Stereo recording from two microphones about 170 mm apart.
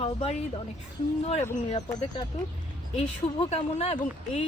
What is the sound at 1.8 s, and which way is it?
Speech, 20° left (ahead or behind).